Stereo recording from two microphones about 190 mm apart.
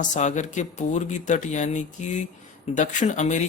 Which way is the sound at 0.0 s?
40° left (ahead or behind).